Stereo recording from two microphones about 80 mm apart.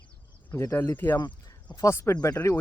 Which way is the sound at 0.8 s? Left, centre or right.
Left.